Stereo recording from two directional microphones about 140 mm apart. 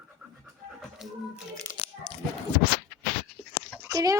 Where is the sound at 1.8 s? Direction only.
40° left (ahead or behind).